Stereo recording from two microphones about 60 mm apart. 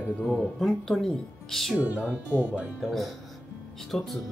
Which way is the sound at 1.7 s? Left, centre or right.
Right.